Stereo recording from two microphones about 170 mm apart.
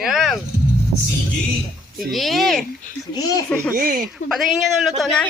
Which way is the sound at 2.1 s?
Centre (ahead or behind).